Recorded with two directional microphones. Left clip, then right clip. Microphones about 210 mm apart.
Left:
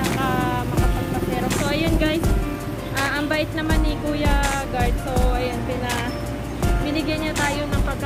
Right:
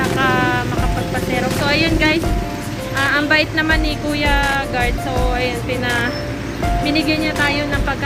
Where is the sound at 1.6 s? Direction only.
5° right (ahead or behind).